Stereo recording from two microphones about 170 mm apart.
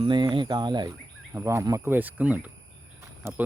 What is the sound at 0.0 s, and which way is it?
Speech, 30° right (ahead or behind).